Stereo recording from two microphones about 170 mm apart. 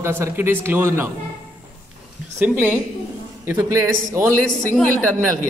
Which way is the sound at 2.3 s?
10° right (ahead or behind).